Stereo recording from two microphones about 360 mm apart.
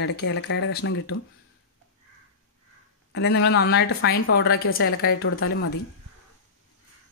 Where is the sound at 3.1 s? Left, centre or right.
Left.